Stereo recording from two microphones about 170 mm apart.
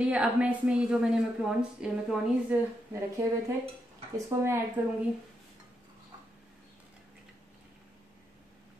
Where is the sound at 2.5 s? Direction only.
15° right (ahead or behind).